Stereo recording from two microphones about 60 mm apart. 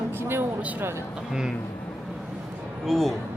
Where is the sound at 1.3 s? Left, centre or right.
Centre.